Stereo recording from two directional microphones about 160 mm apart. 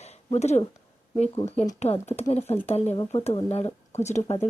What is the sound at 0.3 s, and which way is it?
Speech, 45° left (ahead or behind).